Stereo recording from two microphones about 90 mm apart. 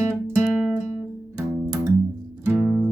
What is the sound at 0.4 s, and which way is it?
Music, 15° right (ahead or behind).